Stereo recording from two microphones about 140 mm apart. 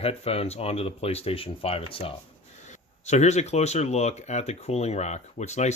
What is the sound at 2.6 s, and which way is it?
Speech, 55° left (ahead or behind).